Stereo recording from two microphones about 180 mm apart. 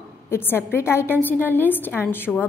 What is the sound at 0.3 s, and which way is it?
A woman's voice, 10° left (ahead or behind).